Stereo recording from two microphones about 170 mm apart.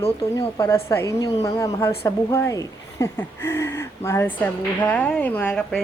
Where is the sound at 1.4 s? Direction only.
20° left (ahead or behind).